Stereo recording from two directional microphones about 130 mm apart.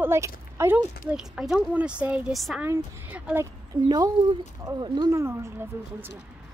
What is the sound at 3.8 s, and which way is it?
Speech, 30° right (ahead or behind).